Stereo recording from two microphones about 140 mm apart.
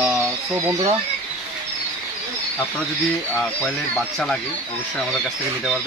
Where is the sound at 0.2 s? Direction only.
20° right (ahead or behind).